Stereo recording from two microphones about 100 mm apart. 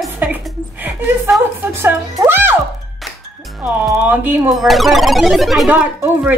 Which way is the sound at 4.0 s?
15° right (ahead or behind).